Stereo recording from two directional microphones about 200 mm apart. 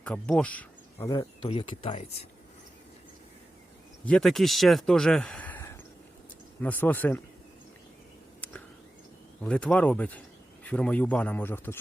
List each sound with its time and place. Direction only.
0.0 s speech: 5° left (ahead or behind)
1.1 s speech: 25° left (ahead or behind)
4.0 s a man's voice: 5° left (ahead or behind)
9.4 s a man's voice: 5° left (ahead or behind)